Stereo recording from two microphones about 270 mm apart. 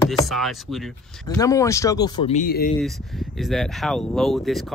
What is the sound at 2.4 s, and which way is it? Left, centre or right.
Speech, left.